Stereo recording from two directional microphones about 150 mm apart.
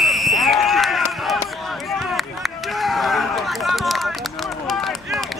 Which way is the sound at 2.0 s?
Centre (ahead or behind).